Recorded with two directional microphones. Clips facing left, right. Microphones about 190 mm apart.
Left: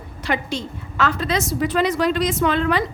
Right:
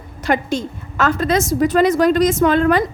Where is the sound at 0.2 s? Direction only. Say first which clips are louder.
Right 6 dB; 45° right (ahead or behind).